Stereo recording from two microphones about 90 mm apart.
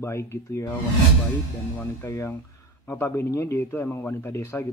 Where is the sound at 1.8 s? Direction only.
25° left (ahead or behind).